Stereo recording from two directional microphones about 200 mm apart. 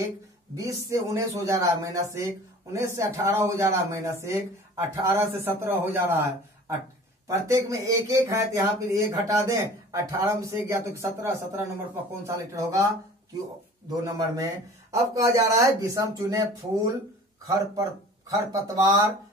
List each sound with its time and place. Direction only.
0.6 s speech: 15° right (ahead or behind)
7.2 s speech: 15° right (ahead or behind)
13.8 s speech: 20° right (ahead or behind)
18.3 s speech: 15° right (ahead or behind)